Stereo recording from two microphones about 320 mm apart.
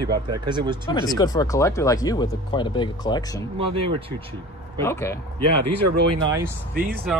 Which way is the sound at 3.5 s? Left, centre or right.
Centre.